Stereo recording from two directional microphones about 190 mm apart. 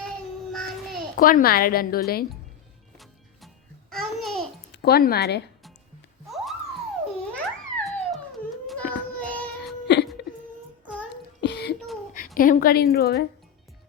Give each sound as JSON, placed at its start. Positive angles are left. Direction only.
{"t": 1.1, "sound": "a woman's voice", "side_deg": 50}
{"t": 3.0, "sound": "music", "side_deg": 0}
{"t": 4.7, "sound": "speech", "side_deg": 55}
{"t": 6.2, "sound": "a sound", "side_deg": 0}
{"t": 8.6, "sound": "child singing", "side_deg": 5}
{"t": 9.8, "sound": "whimper", "side_deg": 60}
{"t": 11.3, "sound": "a sound", "side_deg": 60}
{"t": 12.4, "sound": "a woman's voice", "side_deg": 50}